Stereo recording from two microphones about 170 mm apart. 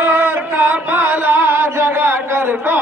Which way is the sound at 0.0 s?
10° right (ahead or behind).